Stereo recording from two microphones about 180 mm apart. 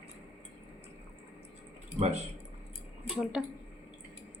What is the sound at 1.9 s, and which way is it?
Speech, 35° right (ahead or behind).